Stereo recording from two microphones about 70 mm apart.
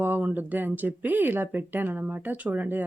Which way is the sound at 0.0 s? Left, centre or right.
Right.